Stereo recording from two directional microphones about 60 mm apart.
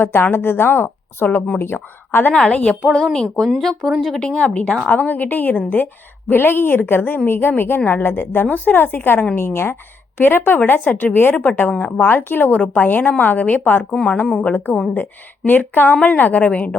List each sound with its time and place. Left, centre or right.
0.0 s a woman's voice: left
2.5 s a woman's voice: centre
4.2 s speech: centre
4.9 s a woman's voice: left
13.9 s a woman's voice: centre